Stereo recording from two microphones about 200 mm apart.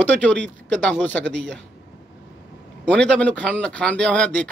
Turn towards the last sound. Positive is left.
turn(degrees=5)  # may be behind; listen again after turning